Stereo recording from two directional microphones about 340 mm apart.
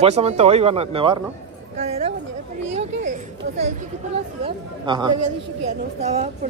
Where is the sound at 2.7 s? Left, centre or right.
Right.